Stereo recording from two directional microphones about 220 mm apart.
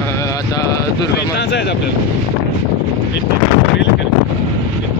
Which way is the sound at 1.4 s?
50° left (ahead or behind).